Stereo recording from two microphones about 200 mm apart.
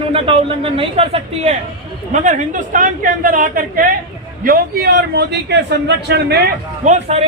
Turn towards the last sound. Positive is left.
turn(degrees=-35)  # may be behind; listen again after turning